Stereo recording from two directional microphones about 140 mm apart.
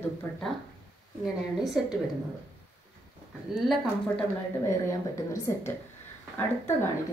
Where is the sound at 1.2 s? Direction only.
Centre (ahead or behind).